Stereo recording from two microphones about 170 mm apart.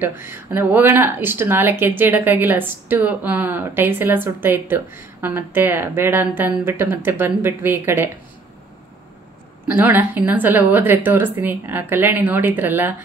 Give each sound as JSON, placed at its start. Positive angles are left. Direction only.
{"t": 0.0, "sound": "speech", "side_deg": -15}
{"t": 9.7, "sound": "speech", "side_deg": -10}